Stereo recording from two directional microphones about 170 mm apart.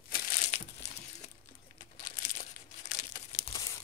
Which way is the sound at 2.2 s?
45° left (ahead or behind).